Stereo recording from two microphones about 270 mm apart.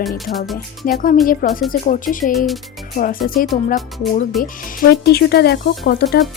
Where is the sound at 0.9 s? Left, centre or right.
Left.